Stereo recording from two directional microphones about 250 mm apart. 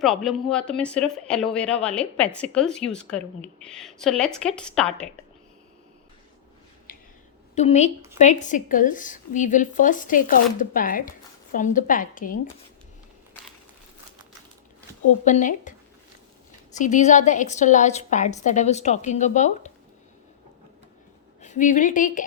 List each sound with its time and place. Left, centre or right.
0.0 s speech: centre
6.9 s a sound: left
7.5 s a woman's voice: left
15.2 s speech: left
16.7 s a woman's voice: left
21.4 s a woman's voice: left